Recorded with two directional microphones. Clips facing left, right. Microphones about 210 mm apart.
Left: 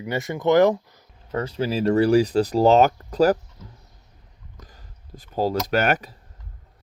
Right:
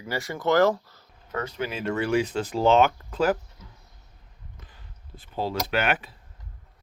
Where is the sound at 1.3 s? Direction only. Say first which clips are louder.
Left 6 dB; 30° left (ahead or behind).